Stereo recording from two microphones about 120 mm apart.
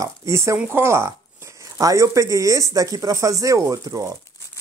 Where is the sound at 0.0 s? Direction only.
25° right (ahead or behind).